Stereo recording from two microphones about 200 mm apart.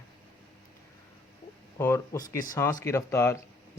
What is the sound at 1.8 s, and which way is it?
Speech, 15° left (ahead or behind).